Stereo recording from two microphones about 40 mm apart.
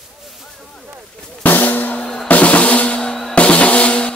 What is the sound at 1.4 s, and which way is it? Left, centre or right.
Drum, left.